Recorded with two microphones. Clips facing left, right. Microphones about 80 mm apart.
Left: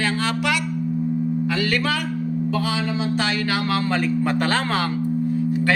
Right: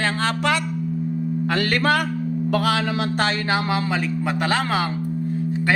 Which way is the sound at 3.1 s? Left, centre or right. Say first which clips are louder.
Even; right.